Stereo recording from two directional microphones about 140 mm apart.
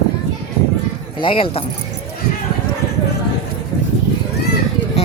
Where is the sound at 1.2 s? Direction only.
40° left (ahead or behind).